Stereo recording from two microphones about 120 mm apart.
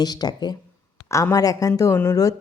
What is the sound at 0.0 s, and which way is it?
Speech, 35° left (ahead or behind).